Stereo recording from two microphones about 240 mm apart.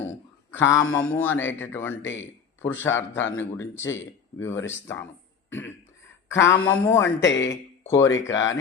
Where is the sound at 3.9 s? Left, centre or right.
Left.